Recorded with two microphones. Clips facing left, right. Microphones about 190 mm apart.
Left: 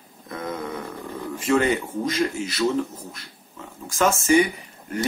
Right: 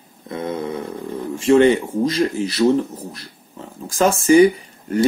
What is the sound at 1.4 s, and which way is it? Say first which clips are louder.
Speech: right 8 dB; 30° right (ahead or behind).